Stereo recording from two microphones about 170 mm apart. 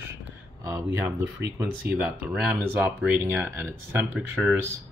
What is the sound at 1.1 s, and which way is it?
Speech, 10° right (ahead or behind).